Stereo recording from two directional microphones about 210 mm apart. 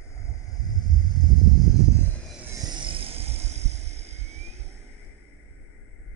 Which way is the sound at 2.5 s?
20° right (ahead or behind).